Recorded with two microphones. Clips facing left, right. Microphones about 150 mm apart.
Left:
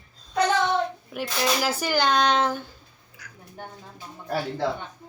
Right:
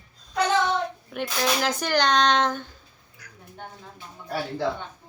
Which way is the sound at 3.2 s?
90° left.